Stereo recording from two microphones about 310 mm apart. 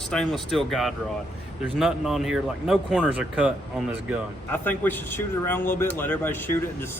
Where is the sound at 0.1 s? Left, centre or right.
Centre.